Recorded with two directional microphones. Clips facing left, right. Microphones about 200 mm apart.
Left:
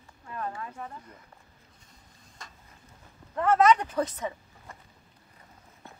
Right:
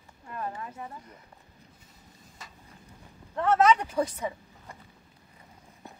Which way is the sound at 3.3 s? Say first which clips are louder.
Left 1 dB; 5° right (ahead or behind).